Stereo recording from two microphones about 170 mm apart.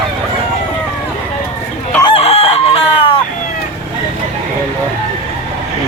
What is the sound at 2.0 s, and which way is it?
Chicken, 35° left (ahead or behind).